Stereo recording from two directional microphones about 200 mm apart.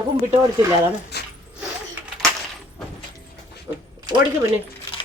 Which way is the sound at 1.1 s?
55° left (ahead or behind).